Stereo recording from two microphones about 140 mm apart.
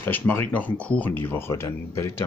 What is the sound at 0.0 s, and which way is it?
Speech, 15° left (ahead or behind).